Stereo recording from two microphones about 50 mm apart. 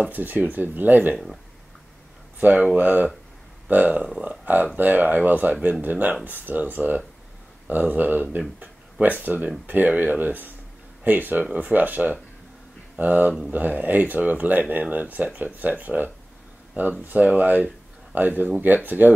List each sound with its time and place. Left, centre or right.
0.1 s speech: right
1.1 s speech: centre
2.4 s speech: right